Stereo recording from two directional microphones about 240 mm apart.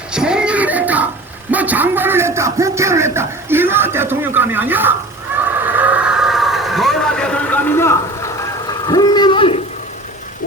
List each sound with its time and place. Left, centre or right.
0.1 s music: centre
1.5 s a sound: centre
8.9 s speech: centre